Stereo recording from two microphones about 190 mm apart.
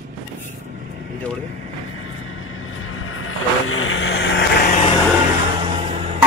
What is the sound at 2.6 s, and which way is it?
Vehicle, 90° left.